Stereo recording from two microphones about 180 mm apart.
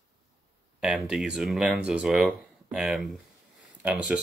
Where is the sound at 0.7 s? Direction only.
5° right (ahead or behind).